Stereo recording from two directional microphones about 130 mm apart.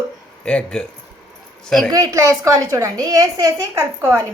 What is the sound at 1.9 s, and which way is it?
A woman's voice, 25° right (ahead or behind).